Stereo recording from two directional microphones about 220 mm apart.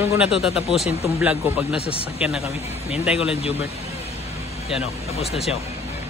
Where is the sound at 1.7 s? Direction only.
25° left (ahead or behind).